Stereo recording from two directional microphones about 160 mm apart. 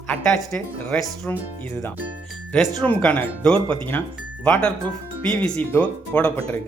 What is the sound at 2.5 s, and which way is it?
Speech, centre (ahead or behind).